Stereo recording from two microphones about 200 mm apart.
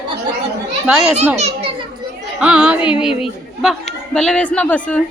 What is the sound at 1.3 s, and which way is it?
Children playing, 30° right (ahead or behind).